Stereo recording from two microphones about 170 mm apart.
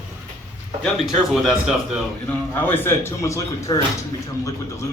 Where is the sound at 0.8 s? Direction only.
Centre (ahead or behind).